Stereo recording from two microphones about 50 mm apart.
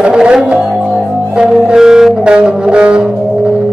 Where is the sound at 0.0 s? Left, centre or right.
Centre.